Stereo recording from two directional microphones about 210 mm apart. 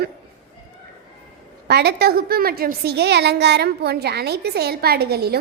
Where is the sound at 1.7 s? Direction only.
50° right (ahead or behind).